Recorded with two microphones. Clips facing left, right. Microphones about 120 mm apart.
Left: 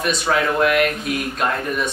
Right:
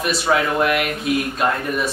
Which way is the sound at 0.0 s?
5° right (ahead or behind).